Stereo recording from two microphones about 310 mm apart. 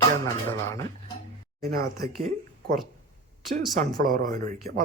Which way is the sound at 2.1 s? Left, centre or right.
Right.